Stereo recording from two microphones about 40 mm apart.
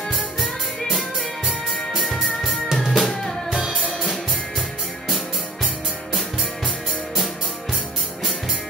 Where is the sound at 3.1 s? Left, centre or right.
Centre.